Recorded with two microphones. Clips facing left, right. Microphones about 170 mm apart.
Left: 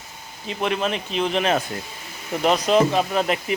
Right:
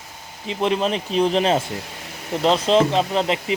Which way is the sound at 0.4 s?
30° right (ahead or behind).